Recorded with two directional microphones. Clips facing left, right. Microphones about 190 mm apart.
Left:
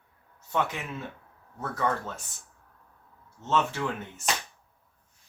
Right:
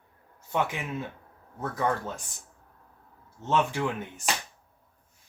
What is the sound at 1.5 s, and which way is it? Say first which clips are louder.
Speech: right 1 dB; 15° right (ahead or behind).